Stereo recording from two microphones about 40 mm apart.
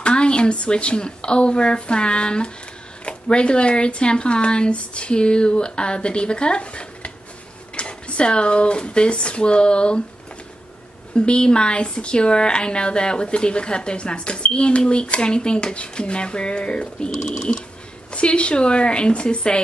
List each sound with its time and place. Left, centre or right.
0.0 s speech: left
11.1 s speech: left
17.1 s a sound: centre
18.1 s speech: left